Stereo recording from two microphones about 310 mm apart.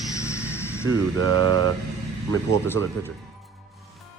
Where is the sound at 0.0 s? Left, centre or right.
Centre.